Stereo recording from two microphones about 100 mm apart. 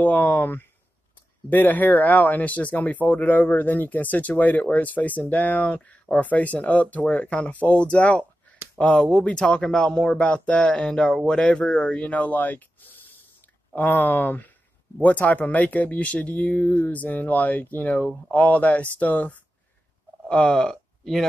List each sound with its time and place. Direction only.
0.0 s speech: 15° left (ahead or behind)